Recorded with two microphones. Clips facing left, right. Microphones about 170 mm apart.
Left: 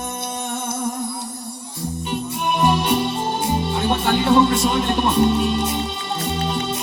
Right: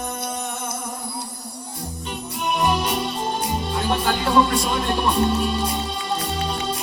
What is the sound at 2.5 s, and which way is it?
Music, 25° left (ahead or behind).